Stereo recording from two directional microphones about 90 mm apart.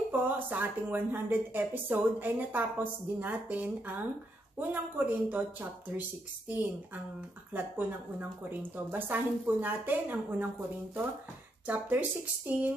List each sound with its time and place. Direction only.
0.1 s speech: 20° right (ahead or behind)
7.5 s speech: 20° right (ahead or behind)
11.6 s speech: 20° right (ahead or behind)